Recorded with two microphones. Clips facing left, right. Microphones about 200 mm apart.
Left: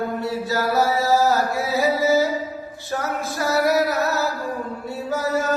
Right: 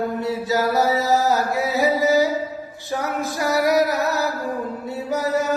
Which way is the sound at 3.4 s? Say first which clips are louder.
Right 1 dB; 15° right (ahead or behind).